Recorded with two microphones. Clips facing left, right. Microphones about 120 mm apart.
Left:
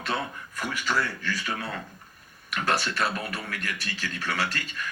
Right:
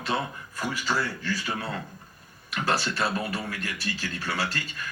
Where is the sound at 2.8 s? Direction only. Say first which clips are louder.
Right 1 dB; 30° right (ahead or behind).